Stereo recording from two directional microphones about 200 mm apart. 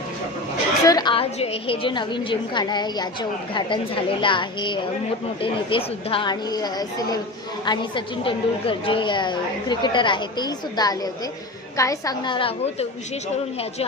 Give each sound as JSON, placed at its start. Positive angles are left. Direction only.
{"t": 0.9, "sound": "a woman's voice", "side_deg": 20}